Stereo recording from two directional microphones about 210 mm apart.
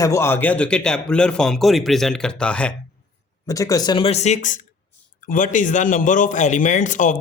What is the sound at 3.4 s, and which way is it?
A man's voice, 15° left (ahead or behind).